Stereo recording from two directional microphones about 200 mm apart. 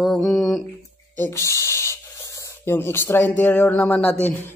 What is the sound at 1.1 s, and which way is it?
Speech, 10° left (ahead or behind).